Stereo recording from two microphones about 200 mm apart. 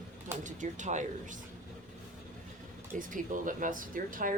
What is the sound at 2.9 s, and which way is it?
Speech, 40° right (ahead or behind).